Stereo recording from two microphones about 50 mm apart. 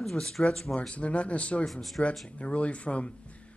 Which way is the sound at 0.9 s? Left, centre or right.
Left.